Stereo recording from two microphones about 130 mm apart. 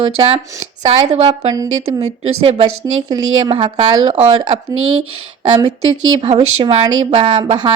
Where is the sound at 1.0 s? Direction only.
50° right (ahead or behind).